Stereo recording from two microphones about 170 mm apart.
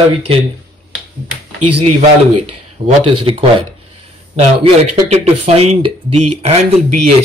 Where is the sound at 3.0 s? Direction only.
30° right (ahead or behind).